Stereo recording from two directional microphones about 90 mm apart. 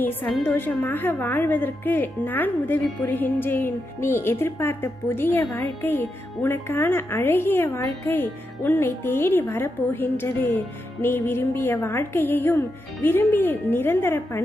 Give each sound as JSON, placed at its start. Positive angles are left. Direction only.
{"t": 0.0, "sound": "speech", "side_deg": 20}
{"t": 7.8, "sound": "speech", "side_deg": 40}
{"t": 8.1, "sound": "speech", "side_deg": 25}